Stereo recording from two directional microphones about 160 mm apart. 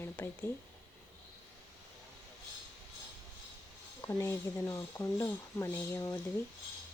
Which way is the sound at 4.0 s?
15° left (ahead or behind).